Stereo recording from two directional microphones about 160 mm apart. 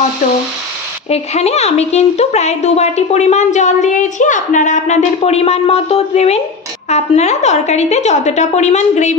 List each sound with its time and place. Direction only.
1.1 s a woman's voice: 40° left (ahead or behind)